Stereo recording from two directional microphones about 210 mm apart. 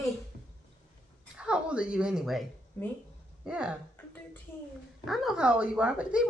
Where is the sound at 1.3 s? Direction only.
5° right (ahead or behind).